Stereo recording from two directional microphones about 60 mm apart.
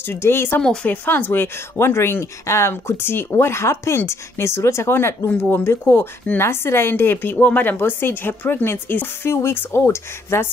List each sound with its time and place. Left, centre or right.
0.0 s speech: left
0.8 s speech: left
4.9 s speech: left